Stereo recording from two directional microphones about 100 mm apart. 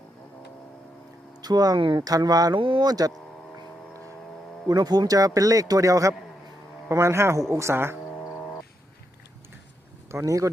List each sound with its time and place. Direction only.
1.4 s speech: 40° right (ahead or behind)
2.6 s speech: 60° right (ahead or behind)
2.8 s speech: 40° right (ahead or behind)
4.7 s speech: 40° right (ahead or behind); by 7.9 s 25° right (ahead or behind)
8.1 s frog: 25° left (ahead or behind)
10.1 s speech: 30° right (ahead or behind)